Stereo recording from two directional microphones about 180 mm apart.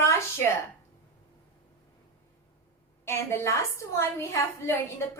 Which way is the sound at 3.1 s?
15° left (ahead or behind).